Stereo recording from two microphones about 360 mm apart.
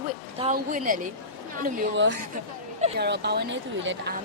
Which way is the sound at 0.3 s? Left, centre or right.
Centre.